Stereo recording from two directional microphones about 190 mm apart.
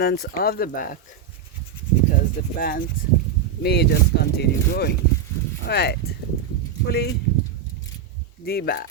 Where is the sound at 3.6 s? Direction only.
60° left (ahead or behind).